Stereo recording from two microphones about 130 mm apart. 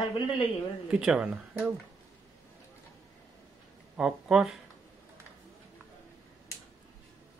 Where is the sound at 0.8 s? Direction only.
5° right (ahead or behind).